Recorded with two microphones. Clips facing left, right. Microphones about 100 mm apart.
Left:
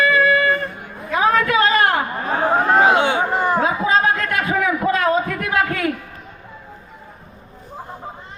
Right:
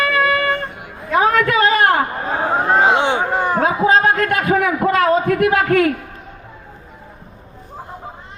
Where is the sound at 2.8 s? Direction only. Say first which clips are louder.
Even; 25° right (ahead or behind).